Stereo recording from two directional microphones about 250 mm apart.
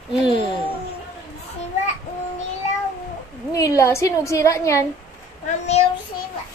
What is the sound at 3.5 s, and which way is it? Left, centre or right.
A woman's voice, centre.